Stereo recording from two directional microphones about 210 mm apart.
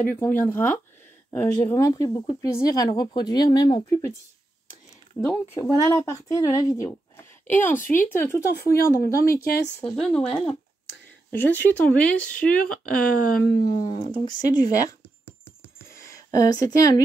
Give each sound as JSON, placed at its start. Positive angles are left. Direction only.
{"t": 0.0, "sound": "speech", "side_deg": 10}
{"t": 5.2, "sound": "speech", "side_deg": 10}
{"t": 9.3, "sound": "speech", "side_deg": 45}
{"t": 9.8, "sound": "speech", "side_deg": 5}
{"t": 13.7, "sound": "speech", "side_deg": 25}
{"t": 15.9, "sound": "a sound", "side_deg": 15}